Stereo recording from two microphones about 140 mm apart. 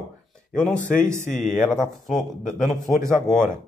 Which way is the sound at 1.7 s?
Centre (ahead or behind).